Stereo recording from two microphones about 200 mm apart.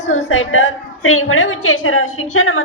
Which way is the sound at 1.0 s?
90° left.